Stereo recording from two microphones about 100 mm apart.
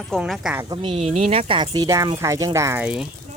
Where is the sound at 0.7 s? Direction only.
45° right (ahead or behind).